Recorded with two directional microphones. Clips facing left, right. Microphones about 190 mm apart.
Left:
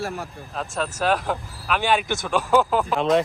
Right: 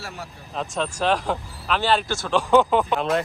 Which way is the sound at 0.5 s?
Centre (ahead or behind).